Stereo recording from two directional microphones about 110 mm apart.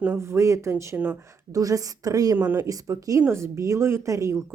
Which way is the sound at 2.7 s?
30° right (ahead or behind).